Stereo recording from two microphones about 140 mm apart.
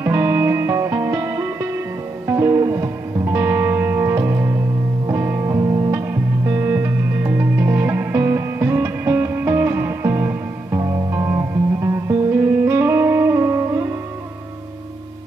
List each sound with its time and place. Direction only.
0.0 s music: 20° right (ahead or behind)